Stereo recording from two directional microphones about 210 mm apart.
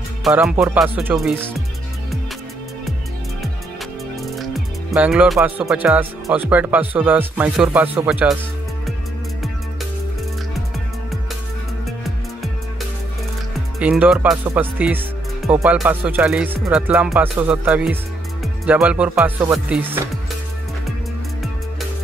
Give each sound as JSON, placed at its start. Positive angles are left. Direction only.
{"t": 0.2, "sound": "speech", "side_deg": -5}
{"t": 4.4, "sound": "speech", "side_deg": -5}
{"t": 13.7, "sound": "speech", "side_deg": -5}